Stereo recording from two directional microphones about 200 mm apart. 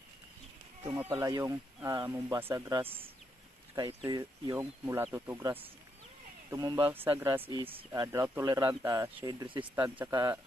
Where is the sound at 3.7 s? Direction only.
25° right (ahead or behind).